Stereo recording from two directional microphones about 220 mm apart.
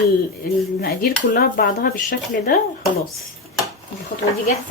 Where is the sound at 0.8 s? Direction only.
45° left (ahead or behind).